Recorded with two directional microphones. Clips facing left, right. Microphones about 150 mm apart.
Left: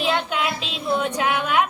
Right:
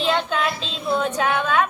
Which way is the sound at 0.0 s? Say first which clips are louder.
Right 1 dB; 15° left (ahead or behind).